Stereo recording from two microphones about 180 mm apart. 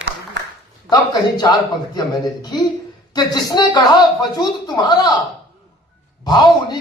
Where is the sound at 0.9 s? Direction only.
20° left (ahead or behind).